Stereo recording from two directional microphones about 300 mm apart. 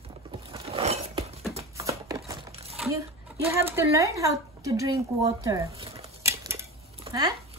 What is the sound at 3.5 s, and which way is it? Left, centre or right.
Speech, centre.